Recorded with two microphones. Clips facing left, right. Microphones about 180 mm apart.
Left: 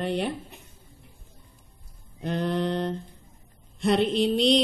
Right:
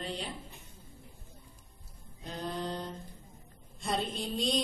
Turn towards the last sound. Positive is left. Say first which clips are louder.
# left 11 dB
turn(degrees=75)  # may be behind; listen again after turning